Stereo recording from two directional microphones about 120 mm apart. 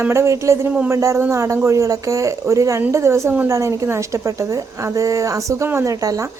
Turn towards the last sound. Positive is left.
turn(degrees=-30)  # may be behind; listen again after turning